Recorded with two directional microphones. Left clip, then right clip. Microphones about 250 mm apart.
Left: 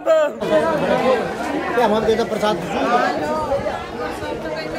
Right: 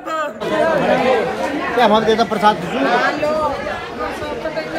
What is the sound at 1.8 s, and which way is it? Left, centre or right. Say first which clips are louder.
Speech: right 4 dB; right.